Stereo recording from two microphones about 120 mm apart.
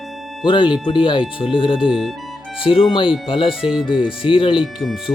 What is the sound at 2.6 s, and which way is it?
Speech, 45° left (ahead or behind).